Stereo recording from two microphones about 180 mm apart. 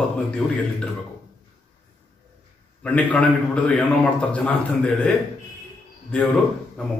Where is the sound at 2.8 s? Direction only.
5° left (ahead or behind).